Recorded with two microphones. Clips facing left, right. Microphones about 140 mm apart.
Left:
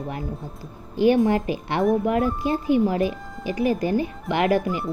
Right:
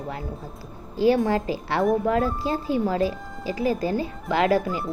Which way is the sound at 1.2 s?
20° left (ahead or behind).